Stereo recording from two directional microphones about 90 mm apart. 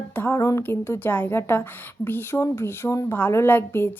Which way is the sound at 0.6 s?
25° left (ahead or behind).